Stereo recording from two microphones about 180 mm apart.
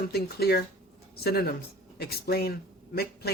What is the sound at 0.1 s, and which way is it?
Speech, 65° left (ahead or behind).